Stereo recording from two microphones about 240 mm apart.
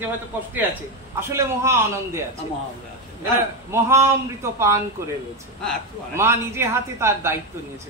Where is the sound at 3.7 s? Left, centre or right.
Centre.